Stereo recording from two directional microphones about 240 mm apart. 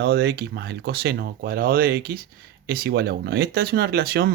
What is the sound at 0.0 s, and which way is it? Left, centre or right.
Speech, right.